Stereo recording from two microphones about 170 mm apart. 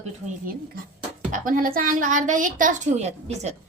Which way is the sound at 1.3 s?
55° right (ahead or behind).